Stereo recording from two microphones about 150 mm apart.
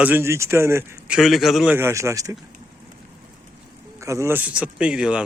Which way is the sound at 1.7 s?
20° right (ahead or behind).